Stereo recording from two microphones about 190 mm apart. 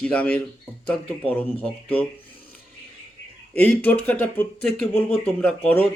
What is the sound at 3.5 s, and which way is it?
Speech, 10° left (ahead or behind).